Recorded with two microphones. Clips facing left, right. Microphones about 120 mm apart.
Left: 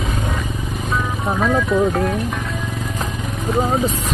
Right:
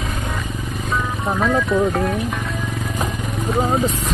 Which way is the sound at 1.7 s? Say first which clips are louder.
Left 1 dB; centre (ahead or behind).